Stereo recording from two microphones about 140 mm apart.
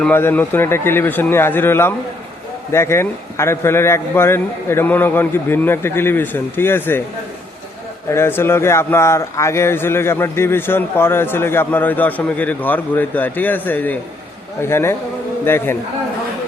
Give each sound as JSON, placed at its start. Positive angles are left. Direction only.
{"t": 0.0, "sound": "a man's voice", "side_deg": 15}
{"t": 8.1, "sound": "a man's voice", "side_deg": 15}